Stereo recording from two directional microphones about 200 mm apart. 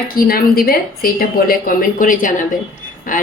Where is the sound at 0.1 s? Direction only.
50° left (ahead or behind).